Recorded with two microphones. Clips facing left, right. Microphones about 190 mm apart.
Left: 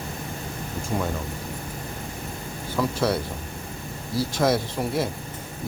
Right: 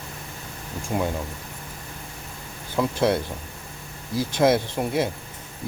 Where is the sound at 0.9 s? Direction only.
20° right (ahead or behind).